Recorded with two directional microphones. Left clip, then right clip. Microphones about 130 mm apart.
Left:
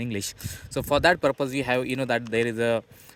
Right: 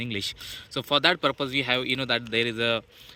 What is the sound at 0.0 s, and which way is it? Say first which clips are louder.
Speech: right 2 dB; 55° left (ahead or behind).